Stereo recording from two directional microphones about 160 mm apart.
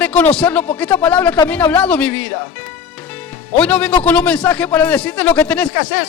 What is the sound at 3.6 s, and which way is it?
Speech, 5° left (ahead or behind).